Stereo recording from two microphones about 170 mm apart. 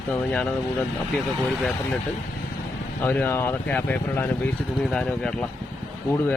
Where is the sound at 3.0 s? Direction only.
10° left (ahead or behind).